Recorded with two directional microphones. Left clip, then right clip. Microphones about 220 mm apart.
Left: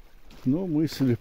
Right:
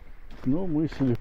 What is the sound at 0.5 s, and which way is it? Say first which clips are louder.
Speech: left 1 dB; 35° left (ahead or behind).